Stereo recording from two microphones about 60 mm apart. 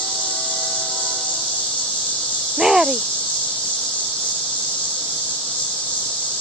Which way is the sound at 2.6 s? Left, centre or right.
Centre.